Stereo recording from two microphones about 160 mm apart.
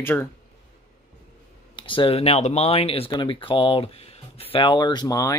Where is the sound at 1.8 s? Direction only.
30° left (ahead or behind).